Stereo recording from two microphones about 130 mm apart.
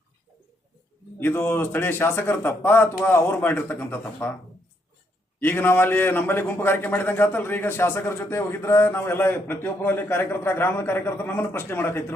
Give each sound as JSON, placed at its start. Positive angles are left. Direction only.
{"t": 1.2, "sound": "a man's voice", "side_deg": 15}
{"t": 5.4, "sound": "a man's voice", "side_deg": 15}